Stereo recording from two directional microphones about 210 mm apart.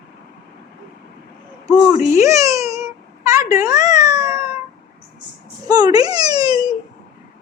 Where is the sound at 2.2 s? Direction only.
15° right (ahead or behind).